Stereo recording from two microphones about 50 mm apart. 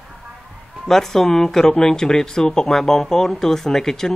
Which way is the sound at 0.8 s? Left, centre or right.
Centre.